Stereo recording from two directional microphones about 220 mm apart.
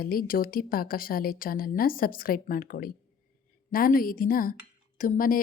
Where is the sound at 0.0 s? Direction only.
40° left (ahead or behind).